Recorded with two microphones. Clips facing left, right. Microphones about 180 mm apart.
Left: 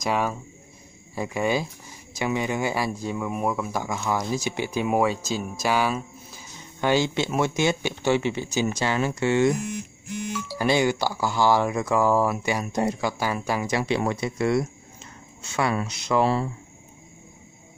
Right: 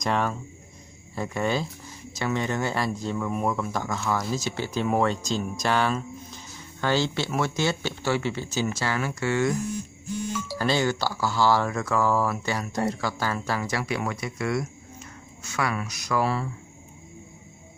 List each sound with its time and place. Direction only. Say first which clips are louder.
0.0 s speech: left 1 dB; 10° left (ahead or behind)
10.6 s speech: left 3 dB; 15° left (ahead or behind)